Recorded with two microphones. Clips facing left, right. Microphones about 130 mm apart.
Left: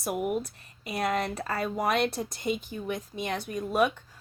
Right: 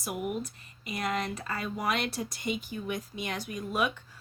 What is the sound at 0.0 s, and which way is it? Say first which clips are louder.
Speech: left 4 dB; 50° left (ahead or behind).